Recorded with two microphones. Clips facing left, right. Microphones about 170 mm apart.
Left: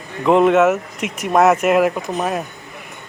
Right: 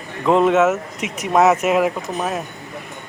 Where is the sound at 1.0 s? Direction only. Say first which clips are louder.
Left 1 dB; 50° left (ahead or behind).